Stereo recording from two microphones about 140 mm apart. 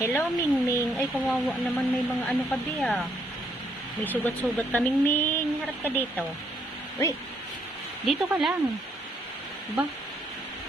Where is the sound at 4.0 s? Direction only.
15° left (ahead or behind).